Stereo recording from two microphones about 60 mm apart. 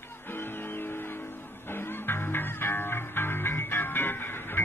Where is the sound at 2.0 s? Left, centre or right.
Left.